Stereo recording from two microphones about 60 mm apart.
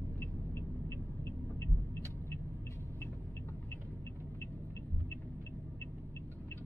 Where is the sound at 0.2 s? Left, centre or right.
Left.